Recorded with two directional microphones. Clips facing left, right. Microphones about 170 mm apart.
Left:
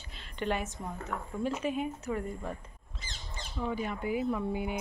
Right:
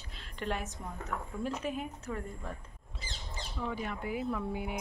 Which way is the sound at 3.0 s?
35° right (ahead or behind).